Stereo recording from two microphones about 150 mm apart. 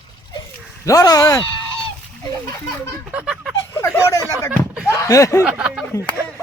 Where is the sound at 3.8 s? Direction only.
20° left (ahead or behind).